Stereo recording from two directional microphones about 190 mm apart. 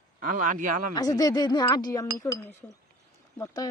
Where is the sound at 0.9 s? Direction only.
20° left (ahead or behind).